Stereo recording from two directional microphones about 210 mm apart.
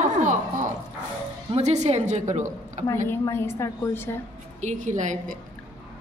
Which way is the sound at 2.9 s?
10° left (ahead or behind).